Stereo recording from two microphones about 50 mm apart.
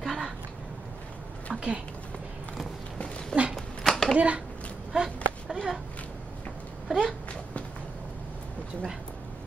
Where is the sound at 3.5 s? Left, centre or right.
Centre.